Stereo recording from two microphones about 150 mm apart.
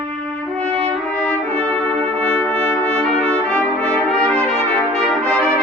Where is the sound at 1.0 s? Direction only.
10° left (ahead or behind).